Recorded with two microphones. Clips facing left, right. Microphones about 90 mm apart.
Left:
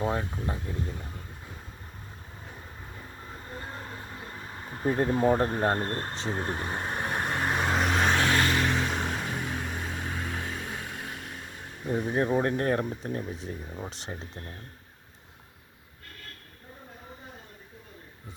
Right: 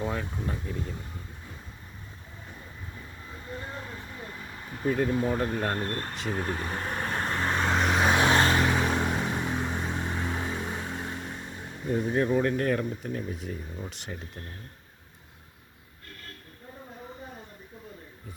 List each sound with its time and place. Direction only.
0.0 s speech: 30° left (ahead or behind)
3.3 s vehicle: 35° left (ahead or behind); by 8.1 s centre (ahead or behind)
8.1 s vehicle: 20° right (ahead or behind)
9.0 s vehicle: 10° right (ahead or behind)
9.3 s vehicle: 20° right (ahead or behind)
12.1 s speech: 30° left (ahead or behind)